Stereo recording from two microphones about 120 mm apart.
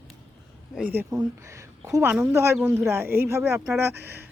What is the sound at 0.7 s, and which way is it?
Speech, 15° right (ahead or behind).